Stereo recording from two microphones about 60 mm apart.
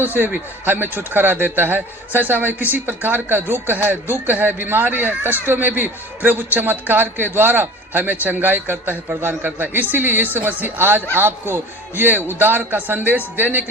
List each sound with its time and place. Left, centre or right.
0.0 s speech: right